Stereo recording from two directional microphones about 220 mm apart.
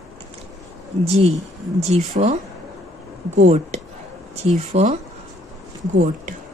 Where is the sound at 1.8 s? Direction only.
30° right (ahead or behind).